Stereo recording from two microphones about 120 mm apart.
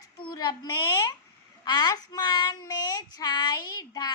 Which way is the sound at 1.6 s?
35° left (ahead or behind).